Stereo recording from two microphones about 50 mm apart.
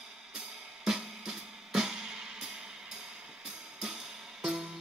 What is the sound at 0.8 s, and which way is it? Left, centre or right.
Music, centre.